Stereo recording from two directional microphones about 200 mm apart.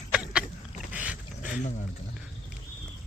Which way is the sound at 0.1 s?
5° right (ahead or behind).